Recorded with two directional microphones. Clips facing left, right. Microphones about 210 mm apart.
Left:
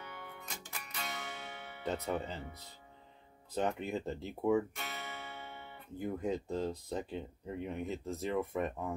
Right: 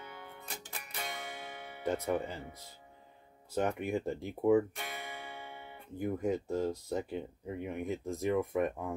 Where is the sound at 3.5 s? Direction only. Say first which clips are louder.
Right 2 dB; 10° right (ahead or behind).